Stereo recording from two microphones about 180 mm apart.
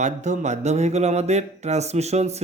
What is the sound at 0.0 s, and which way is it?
Speech, 40° right (ahead or behind).